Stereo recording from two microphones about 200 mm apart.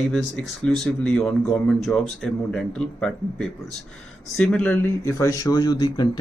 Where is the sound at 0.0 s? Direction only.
Centre (ahead or behind).